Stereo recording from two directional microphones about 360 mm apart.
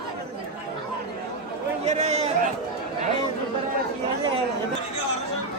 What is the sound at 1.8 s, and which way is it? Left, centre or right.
Speech, centre.